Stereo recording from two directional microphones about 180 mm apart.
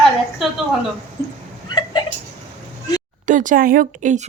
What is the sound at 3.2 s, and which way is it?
Speech, 45° right (ahead or behind).